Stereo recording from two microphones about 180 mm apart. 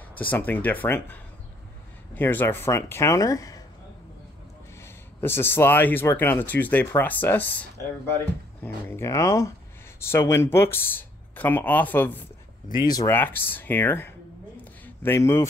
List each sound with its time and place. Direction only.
0.2 s speech: 10° left (ahead or behind)
4.8 s speech: 15° left (ahead or behind)
12.8 s speech: 20° left (ahead or behind)
13.1 s speech: 10° left (ahead or behind)